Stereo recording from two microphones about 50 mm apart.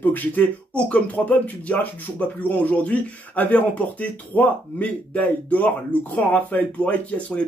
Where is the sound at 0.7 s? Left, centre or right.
Left.